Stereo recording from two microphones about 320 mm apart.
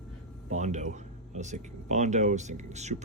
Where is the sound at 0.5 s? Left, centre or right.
Right.